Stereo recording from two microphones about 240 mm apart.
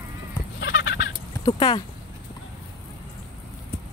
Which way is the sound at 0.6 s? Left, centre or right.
Left.